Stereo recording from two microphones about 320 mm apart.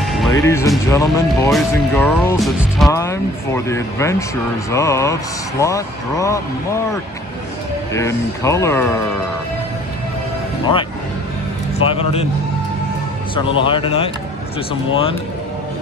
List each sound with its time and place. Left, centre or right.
0.0 s speech: centre
7.9 s speech: centre
11.9 s a man's voice: centre
13.3 s speech: centre